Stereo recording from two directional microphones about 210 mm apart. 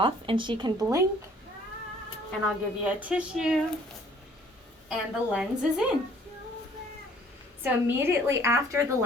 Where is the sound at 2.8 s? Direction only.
5° right (ahead or behind).